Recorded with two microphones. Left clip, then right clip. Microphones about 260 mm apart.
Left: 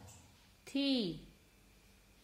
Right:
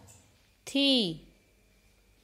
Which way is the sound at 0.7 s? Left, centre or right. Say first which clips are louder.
Right 10 dB; right.